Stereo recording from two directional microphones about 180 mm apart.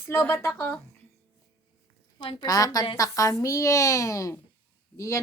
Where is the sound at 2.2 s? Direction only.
25° left (ahead or behind).